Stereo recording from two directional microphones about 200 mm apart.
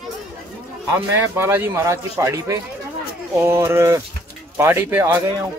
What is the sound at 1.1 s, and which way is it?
Speech, 10° right (ahead or behind).